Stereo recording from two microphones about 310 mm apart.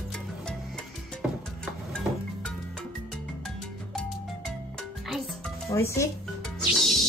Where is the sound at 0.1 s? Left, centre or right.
Centre.